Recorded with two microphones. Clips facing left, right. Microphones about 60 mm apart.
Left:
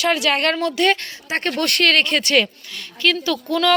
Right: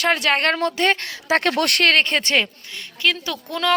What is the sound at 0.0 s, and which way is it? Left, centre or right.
Speech, right.